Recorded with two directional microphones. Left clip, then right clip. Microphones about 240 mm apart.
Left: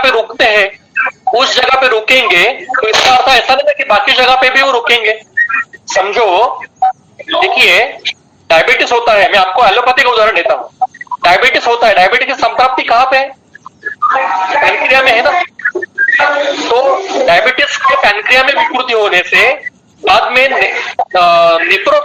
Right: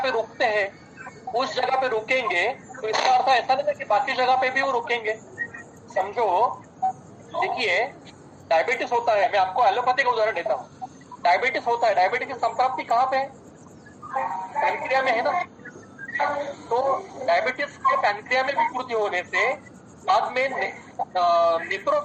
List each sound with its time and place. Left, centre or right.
0.0 s a sound: left
1.6 s speech: left
5.5 s telephone: left
7.3 s a man's voice: left
20.2 s speech: left